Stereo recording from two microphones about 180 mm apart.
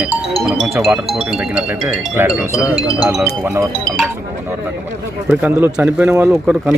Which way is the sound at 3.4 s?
15° right (ahead or behind).